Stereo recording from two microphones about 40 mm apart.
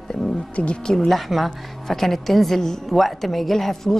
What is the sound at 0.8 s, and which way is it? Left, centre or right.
Speech, centre.